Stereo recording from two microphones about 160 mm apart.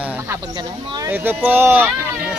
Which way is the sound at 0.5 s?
25° right (ahead or behind).